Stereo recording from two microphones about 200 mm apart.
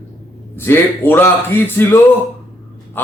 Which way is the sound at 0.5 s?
10° left (ahead or behind).